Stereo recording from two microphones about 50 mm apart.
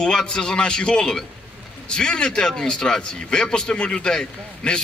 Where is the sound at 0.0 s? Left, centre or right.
Centre.